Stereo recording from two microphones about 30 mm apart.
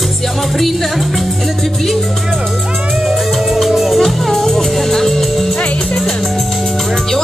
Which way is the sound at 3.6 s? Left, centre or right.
Centre.